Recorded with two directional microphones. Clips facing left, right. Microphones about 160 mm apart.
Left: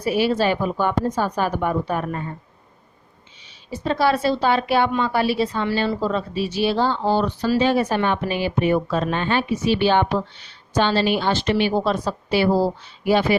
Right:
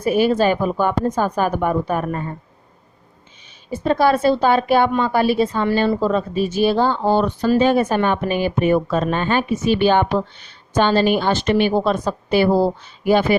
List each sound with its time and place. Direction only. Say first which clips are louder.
0.0 s a woman's voice: right 3 dB; 50° right (ahead or behind)
3.7 s a woman's voice: right 4 dB; 50° right (ahead or behind)